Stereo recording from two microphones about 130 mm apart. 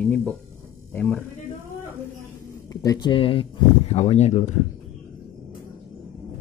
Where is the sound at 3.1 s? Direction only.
45° left (ahead or behind).